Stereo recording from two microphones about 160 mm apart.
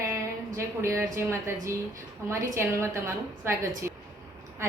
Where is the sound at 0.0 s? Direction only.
15° right (ahead or behind).